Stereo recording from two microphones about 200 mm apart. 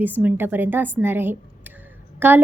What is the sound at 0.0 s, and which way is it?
A woman's voice, 10° right (ahead or behind).